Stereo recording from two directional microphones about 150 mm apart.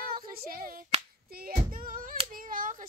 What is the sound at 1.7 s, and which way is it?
Hands, 70° right (ahead or behind).